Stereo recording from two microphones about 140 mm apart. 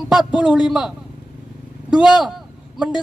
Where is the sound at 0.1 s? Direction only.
5° right (ahead or behind).